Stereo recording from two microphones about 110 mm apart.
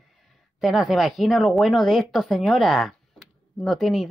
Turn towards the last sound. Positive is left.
turn(degrees=0)  # may be behind; listen again after turning